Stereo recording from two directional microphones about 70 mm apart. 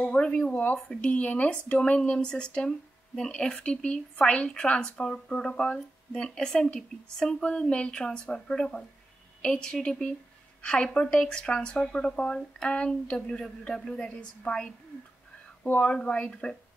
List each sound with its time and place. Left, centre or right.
0.0 s speech: centre